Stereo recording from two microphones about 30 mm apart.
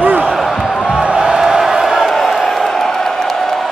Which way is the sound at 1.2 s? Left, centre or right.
Right.